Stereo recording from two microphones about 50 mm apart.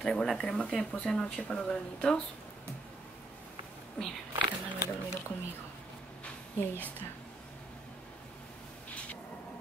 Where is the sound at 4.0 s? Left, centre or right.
Left.